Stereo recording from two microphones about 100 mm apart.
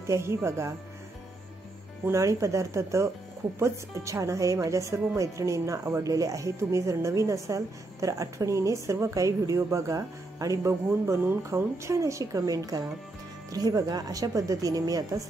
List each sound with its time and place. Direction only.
0.0 s speech: 30° right (ahead or behind)
2.0 s speech: 30° right (ahead or behind)